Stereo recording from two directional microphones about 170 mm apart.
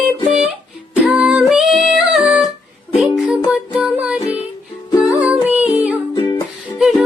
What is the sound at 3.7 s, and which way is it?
Music, 5° right (ahead or behind).